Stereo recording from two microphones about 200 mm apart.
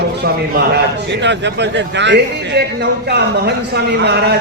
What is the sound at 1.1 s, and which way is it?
A man's voice, 60° right (ahead or behind).